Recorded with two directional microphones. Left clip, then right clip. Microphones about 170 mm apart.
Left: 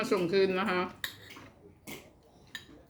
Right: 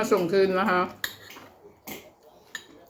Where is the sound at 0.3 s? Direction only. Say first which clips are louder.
Right 6 dB; 15° left (ahead or behind).